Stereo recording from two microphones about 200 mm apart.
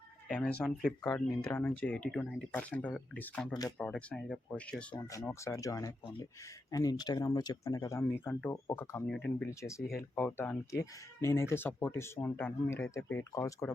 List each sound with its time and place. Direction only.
0.3 s speech: 5° left (ahead or behind)